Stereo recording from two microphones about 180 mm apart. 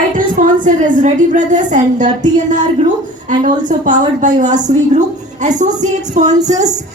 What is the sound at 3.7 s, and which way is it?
A woman's voice, 45° right (ahead or behind).